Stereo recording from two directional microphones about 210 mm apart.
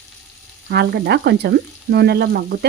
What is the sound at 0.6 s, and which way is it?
Speech, 50° right (ahead or behind).